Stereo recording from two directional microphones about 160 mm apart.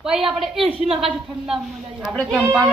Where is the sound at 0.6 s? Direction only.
35° right (ahead or behind).